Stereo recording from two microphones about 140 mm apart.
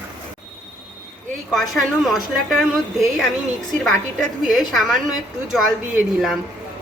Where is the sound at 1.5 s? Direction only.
Centre (ahead or behind).